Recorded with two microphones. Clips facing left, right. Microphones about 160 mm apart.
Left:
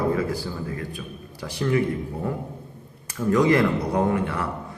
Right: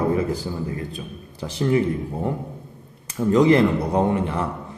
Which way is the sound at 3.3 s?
25° right (ahead or behind).